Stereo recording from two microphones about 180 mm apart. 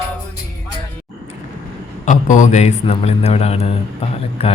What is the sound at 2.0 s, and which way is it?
A man's voice, 45° left (ahead or behind).